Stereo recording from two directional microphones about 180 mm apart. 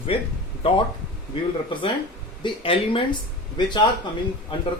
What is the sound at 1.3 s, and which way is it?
Speech, 30° left (ahead or behind).